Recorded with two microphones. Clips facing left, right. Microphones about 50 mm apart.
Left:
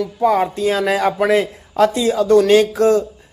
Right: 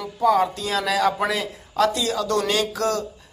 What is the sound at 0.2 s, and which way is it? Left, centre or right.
Speech, left.